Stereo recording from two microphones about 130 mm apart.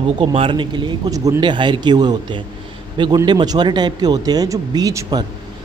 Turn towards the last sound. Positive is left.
turn(degrees=-30)  # may be behind; listen again after turning